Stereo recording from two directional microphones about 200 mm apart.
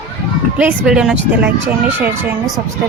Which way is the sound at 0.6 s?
5° right (ahead or behind).